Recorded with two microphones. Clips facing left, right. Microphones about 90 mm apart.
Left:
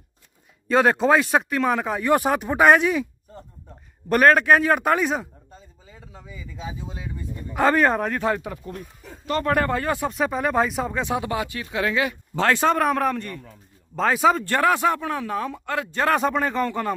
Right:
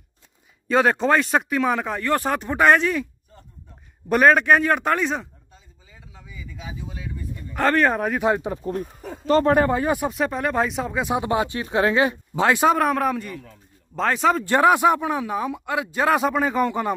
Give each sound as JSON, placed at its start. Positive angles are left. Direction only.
{"t": 0.7, "sound": "speech", "side_deg": 0}
{"t": 4.1, "sound": "speech", "side_deg": 0}
{"t": 5.5, "sound": "speech", "side_deg": 35}
{"t": 7.5, "sound": "speech", "side_deg": 5}
{"t": 8.3, "sound": "speech", "side_deg": -25}
{"t": 9.5, "sound": "speech", "side_deg": -20}
{"t": 10.1, "sound": "speech", "side_deg": 0}
{"t": 11.1, "sound": "speech", "side_deg": -25}
{"t": 12.4, "sound": "speech", "side_deg": -15}
{"t": 12.7, "sound": "speech", "side_deg": 0}
{"t": 14.4, "sound": "speech", "side_deg": -15}